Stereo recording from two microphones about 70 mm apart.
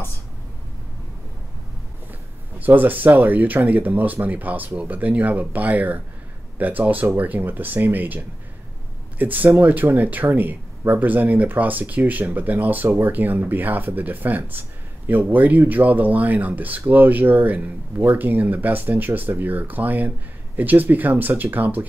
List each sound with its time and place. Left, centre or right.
2.6 s speech: right
9.2 s speech: right